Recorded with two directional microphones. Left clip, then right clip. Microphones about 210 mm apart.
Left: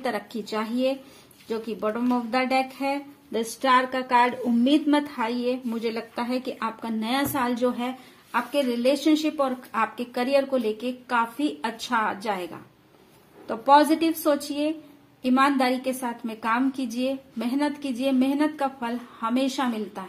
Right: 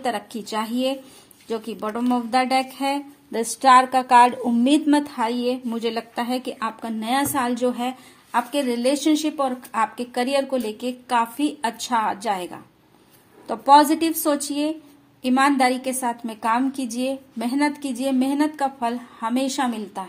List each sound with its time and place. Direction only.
0.0 s speech: 25° right (ahead or behind)
8.3 s a woman's voice: 35° right (ahead or behind)